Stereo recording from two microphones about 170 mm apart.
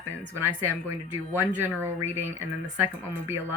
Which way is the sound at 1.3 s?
15° right (ahead or behind).